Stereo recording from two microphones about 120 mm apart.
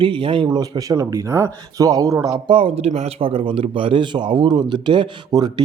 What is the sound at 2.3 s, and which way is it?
Speech, 45° right (ahead or behind).